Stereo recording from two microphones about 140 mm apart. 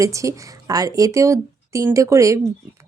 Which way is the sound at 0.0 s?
20° right (ahead or behind).